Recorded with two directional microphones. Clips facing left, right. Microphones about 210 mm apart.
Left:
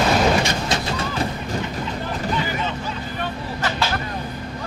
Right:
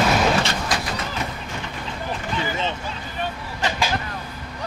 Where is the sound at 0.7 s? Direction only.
30° left (ahead or behind).